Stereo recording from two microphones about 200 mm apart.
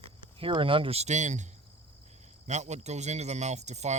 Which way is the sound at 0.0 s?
25° right (ahead or behind).